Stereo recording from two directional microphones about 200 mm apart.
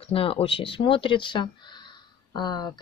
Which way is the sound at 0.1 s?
30° left (ahead or behind).